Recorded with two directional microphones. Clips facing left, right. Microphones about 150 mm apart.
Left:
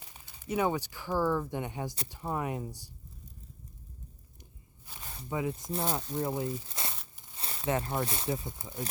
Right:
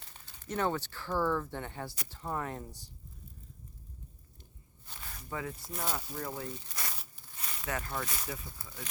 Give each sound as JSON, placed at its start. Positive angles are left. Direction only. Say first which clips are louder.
{"t": 0.0, "sound": "speech", "louder": "left 3 dB", "side_deg": 10}
{"t": 4.9, "sound": "speech", "louder": "left 5 dB", "side_deg": 20}